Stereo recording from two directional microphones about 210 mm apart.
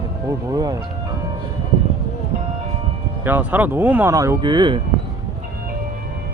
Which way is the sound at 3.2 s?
10° right (ahead or behind).